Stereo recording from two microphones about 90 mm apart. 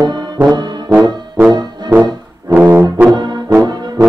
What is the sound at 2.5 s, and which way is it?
Brass instrument, 25° right (ahead or behind).